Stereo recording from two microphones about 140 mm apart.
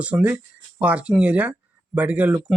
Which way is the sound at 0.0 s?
10° right (ahead or behind).